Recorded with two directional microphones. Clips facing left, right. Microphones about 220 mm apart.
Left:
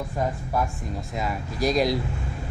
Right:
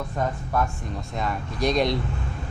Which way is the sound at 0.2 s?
25° left (ahead or behind).